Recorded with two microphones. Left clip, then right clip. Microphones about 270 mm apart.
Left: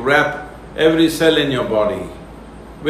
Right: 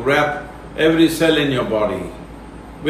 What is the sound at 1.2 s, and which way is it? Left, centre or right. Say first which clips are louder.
Speech: left 4 dB; centre.